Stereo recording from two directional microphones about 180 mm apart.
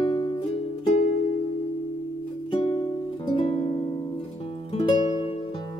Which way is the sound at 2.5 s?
30° left (ahead or behind).